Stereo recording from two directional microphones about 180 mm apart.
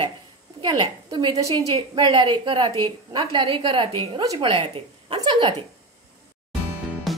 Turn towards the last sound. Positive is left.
turn(degrees=0)  # may be behind; listen again after turning